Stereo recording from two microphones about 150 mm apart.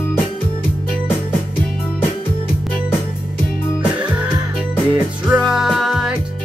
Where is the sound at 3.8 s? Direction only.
10° right (ahead or behind).